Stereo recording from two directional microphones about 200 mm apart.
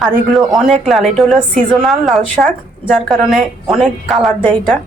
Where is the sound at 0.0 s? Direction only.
Centre (ahead or behind).